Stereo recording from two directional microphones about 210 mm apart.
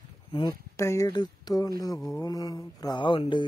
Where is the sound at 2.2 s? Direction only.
15° left (ahead or behind).